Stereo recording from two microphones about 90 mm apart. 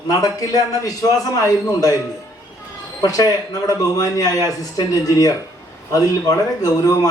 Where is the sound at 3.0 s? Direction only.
45° left (ahead or behind).